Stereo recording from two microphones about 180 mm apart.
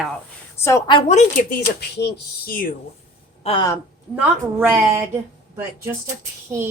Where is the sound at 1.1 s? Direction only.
50° left (ahead or behind).